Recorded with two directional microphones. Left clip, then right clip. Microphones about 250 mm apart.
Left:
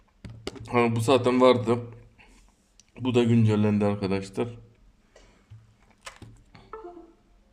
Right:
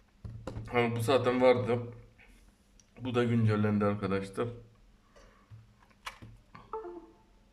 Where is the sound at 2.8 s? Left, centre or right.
Centre.